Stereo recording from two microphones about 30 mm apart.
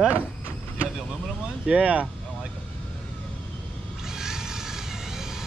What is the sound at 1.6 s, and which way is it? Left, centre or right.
Speech, right.